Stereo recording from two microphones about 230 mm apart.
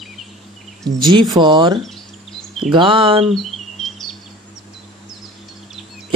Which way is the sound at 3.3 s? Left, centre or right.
Centre.